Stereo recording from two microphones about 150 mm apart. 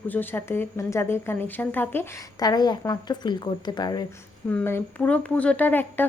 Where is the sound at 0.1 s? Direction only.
15° left (ahead or behind).